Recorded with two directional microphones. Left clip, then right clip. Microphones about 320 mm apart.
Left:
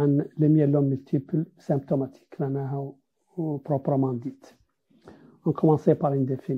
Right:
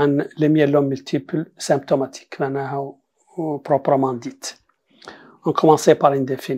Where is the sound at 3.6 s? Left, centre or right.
Centre.